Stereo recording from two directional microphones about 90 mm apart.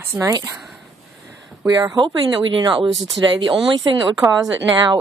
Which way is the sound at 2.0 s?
65° right (ahead or behind).